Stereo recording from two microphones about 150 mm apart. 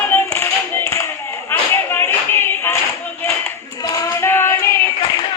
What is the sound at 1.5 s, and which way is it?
Clapping, 15° left (ahead or behind).